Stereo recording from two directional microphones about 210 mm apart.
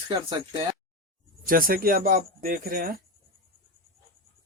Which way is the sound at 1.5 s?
45° right (ahead or behind).